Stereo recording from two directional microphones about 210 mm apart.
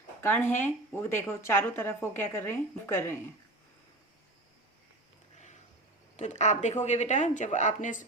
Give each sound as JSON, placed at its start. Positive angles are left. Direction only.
{"t": 0.2, "sound": "a woman's voice", "side_deg": 10}
{"t": 6.1, "sound": "speech", "side_deg": 35}